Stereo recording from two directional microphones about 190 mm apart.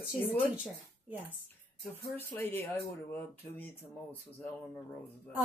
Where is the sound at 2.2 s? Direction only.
10° left (ahead or behind).